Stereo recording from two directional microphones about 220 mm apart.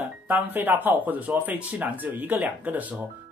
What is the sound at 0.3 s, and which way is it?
Speech, 10° right (ahead or behind).